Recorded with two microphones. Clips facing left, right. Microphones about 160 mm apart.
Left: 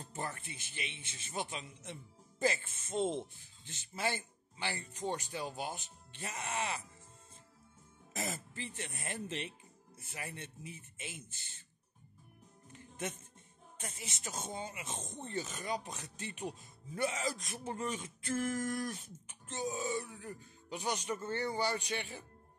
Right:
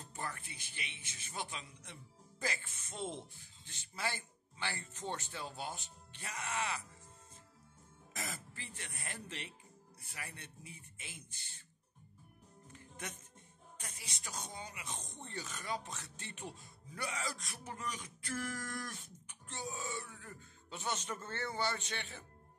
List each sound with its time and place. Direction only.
0.0 s speech: 25° left (ahead or behind)
8.2 s speech: 20° left (ahead or behind)
13.7 s speech: 25° left (ahead or behind)